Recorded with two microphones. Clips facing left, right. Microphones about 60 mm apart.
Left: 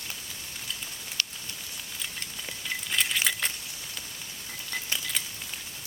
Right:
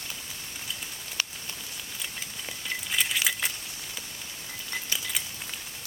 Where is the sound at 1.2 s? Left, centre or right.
Centre.